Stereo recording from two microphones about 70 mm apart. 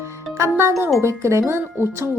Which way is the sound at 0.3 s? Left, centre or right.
Right.